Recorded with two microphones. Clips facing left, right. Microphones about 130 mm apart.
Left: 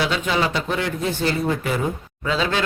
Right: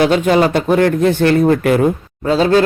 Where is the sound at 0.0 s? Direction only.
50° right (ahead or behind).